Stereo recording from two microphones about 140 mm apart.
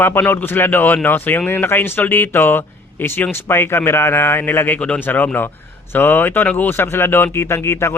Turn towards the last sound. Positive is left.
turn(degrees=20)  # may be behind; listen again after turning